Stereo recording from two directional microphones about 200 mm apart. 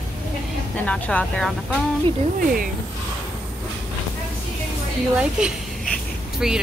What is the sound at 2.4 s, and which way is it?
Speech, 45° right (ahead or behind).